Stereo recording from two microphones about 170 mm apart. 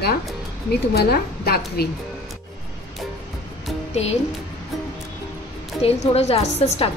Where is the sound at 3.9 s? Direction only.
40° left (ahead or behind).